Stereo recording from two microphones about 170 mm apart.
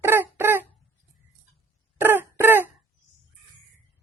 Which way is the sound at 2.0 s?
10° right (ahead or behind).